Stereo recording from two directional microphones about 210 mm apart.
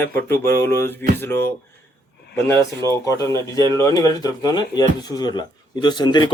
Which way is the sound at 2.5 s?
15° left (ahead or behind).